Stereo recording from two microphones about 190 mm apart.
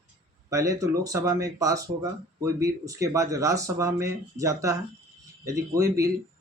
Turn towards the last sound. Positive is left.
turn(degrees=-15)  # may be behind; listen again after turning